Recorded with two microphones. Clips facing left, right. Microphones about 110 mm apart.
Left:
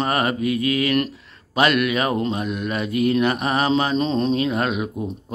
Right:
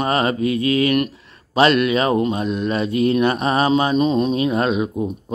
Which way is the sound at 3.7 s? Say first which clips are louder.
Right 3 dB; 15° right (ahead or behind).